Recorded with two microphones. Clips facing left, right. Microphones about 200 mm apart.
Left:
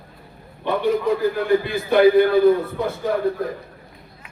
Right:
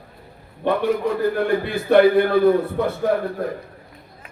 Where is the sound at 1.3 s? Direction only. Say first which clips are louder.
Left 1 dB; 60° right (ahead or behind).